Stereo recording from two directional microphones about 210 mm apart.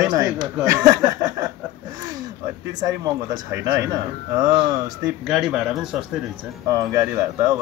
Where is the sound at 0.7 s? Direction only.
15° right (ahead or behind).